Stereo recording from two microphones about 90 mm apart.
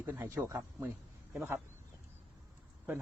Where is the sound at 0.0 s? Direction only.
20° right (ahead or behind).